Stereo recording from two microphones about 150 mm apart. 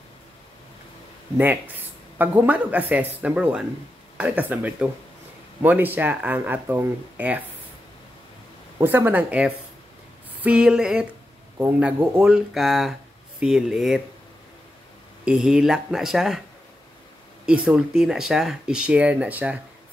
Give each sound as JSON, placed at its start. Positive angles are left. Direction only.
{"t": 2.1, "sound": "speech", "side_deg": -10}
{"t": 8.8, "sound": "speech", "side_deg": -10}
{"t": 15.2, "sound": "speech", "side_deg": -5}
{"t": 17.5, "sound": "speech", "side_deg": -5}